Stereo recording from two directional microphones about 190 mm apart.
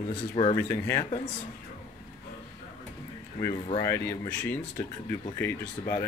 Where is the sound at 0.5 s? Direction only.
15° left (ahead or behind).